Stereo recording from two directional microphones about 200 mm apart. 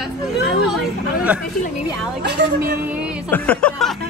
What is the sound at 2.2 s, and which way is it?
Speech, 55° right (ahead or behind).